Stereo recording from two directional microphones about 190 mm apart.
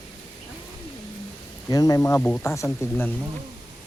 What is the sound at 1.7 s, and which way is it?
Speech, 20° left (ahead or behind).